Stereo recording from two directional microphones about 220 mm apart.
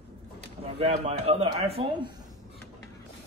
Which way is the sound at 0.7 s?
30° right (ahead or behind).